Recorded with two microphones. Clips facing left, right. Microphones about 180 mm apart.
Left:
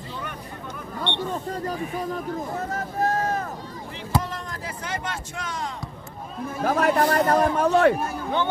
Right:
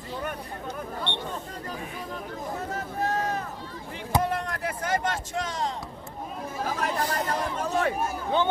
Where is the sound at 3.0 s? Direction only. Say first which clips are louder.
Left 4 dB; 45° left (ahead or behind).